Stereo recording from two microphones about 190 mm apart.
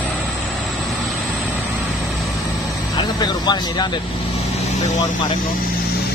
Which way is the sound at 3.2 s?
20° left (ahead or behind).